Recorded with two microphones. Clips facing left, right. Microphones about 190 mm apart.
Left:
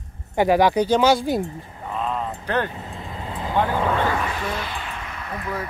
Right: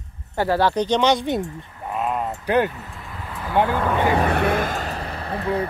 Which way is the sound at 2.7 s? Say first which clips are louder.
Left 3 dB; 25° left (ahead or behind).